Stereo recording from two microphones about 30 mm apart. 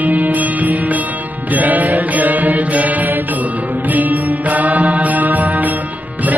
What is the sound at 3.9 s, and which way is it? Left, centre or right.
Mantra, right.